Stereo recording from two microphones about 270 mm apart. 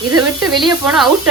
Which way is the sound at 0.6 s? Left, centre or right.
Centre.